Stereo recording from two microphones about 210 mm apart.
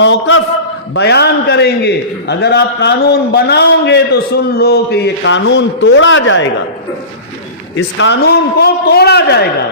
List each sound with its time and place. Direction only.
0.0 s a man's voice: 65° left (ahead or behind)
0.9 s a man's voice: 50° left (ahead or behind)
7.8 s a man's voice: 60° left (ahead or behind)